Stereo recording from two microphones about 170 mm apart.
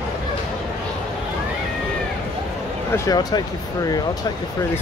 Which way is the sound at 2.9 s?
20° left (ahead or behind).